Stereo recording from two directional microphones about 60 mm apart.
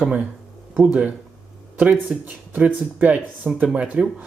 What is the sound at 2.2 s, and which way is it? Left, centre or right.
Speech, right.